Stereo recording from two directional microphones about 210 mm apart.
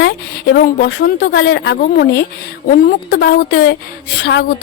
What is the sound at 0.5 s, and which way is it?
A woman's voice, 55° left (ahead or behind).